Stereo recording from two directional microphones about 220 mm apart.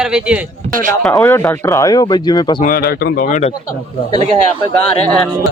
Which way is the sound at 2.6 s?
40° left (ahead or behind).